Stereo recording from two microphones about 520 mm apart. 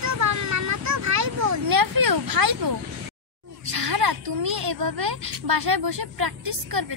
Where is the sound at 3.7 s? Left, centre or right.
Right.